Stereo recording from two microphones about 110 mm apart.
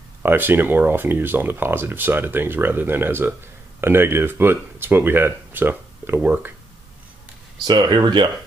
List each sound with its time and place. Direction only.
0.2 s speech: 20° right (ahead or behind)
7.6 s speech: 40° right (ahead or behind)